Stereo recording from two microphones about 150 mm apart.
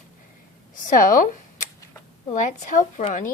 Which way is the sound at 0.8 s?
65° left (ahead or behind).